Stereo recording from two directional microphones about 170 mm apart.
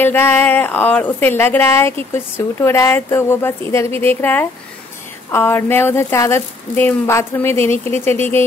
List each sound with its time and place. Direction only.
0.0 s speech: 15° left (ahead or behind)